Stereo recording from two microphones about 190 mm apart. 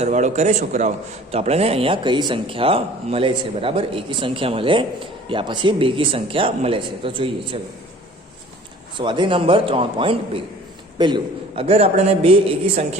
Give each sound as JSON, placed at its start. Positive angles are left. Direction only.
{"t": 0.0, "sound": "a man's voice", "side_deg": -40}
{"t": 9.0, "sound": "a man's voice", "side_deg": -25}